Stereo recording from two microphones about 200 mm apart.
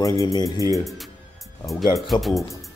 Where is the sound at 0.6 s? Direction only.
15° right (ahead or behind).